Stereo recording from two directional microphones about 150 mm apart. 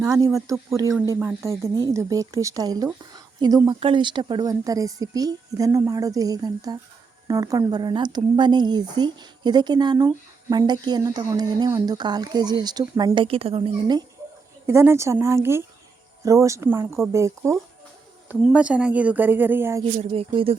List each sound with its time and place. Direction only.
0.0 s speech: 20° right (ahead or behind); by 13.7 s 40° right (ahead or behind)
14.7 s speech: 20° right (ahead or behind)
18.4 s speech: 10° right (ahead or behind)
19.8 s speech: 40° right (ahead or behind)